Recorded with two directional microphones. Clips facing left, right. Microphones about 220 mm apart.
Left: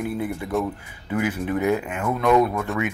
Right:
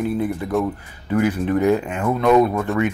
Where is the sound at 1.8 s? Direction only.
30° right (ahead or behind).